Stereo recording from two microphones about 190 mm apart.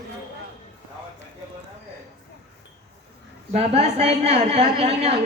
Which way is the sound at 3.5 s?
35° right (ahead or behind).